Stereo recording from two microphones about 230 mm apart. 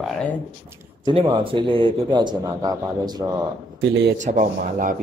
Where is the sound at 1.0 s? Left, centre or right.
Right.